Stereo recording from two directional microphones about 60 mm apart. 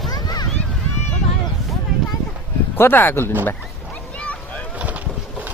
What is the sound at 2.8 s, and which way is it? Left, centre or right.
Speech, left.